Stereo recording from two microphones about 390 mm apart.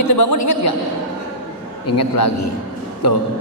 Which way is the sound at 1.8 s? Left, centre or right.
Left.